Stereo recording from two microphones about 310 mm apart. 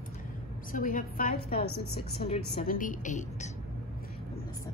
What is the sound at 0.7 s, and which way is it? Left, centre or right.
A woman's voice, left.